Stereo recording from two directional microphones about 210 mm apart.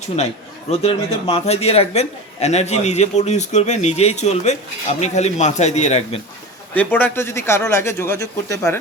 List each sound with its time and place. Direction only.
0.8 s a man's voice: 30° left (ahead or behind)
6.7 s speech: 10° left (ahead or behind)